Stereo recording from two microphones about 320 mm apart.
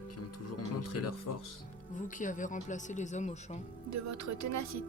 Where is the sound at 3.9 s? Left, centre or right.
Right.